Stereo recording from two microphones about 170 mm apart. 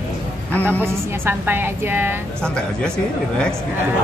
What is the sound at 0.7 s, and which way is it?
A woman's voice, 15° right (ahead or behind).